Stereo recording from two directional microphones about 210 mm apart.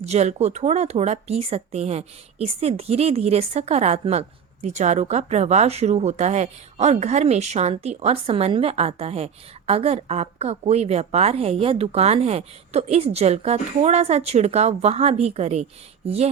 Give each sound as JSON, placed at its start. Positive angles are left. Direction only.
{"t": 0.0, "sound": "speech", "side_deg": -30}